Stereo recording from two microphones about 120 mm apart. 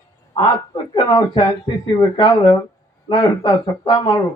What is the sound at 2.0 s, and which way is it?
Speech, 35° left (ahead or behind).